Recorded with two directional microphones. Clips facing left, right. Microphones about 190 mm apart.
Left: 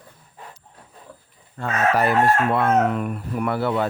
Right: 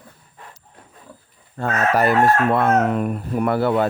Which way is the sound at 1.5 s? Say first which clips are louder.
Right 1 dB; 40° right (ahead or behind).